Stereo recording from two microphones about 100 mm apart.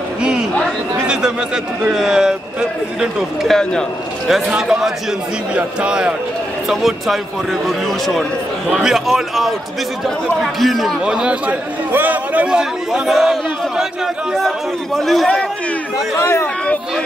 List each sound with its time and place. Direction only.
1.0 s a man's voice: 5° right (ahead or behind)
16.2 s speech: 25° left (ahead or behind)